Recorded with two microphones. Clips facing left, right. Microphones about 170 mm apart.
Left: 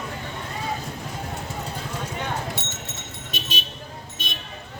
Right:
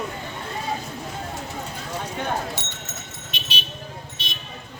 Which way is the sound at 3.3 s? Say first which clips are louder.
Left 4 dB; 45° left (ahead or behind).